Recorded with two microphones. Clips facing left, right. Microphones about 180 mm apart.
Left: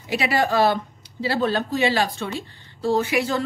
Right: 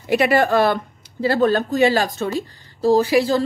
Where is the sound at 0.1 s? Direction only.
55° right (ahead or behind).